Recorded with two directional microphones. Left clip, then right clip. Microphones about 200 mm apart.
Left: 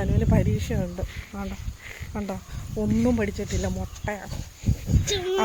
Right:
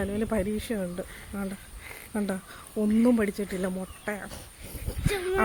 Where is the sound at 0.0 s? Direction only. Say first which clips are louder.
Left 2 dB; 5° right (ahead or behind).